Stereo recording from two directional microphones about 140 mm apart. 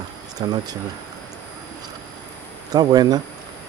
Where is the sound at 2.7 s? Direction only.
30° right (ahead or behind).